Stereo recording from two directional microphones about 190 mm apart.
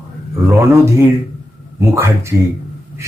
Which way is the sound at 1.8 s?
15° right (ahead or behind).